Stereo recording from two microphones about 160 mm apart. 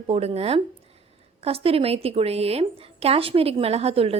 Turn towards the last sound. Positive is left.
turn(degrees=-40)  # may be behind; listen again after turning